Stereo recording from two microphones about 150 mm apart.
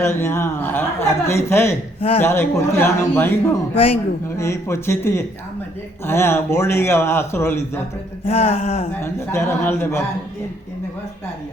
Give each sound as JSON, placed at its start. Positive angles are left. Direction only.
{"t": 0.0, "sound": "a man's voice", "side_deg": 15}
{"t": 2.0, "sound": "a man's voice", "side_deg": 40}
{"t": 2.2, "sound": "a man's voice", "side_deg": 15}
{"t": 8.3, "sound": "a sound", "side_deg": 40}
{"t": 8.9, "sound": "a man's voice", "side_deg": 15}